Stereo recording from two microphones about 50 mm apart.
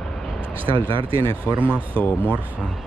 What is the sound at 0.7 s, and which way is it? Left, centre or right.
Speech, left.